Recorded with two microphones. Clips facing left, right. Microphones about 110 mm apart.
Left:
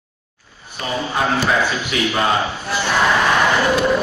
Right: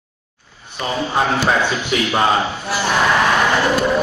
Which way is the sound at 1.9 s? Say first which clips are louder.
Right 2 dB; 30° right (ahead or behind).